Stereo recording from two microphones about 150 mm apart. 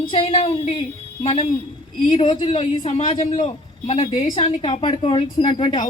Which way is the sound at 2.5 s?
45° left (ahead or behind).